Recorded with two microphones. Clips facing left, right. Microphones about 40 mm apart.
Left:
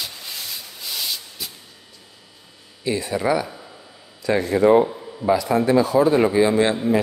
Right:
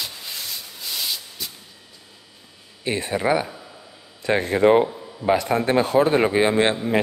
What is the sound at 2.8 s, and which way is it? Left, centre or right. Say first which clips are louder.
A man's voice: left 1 dB; right.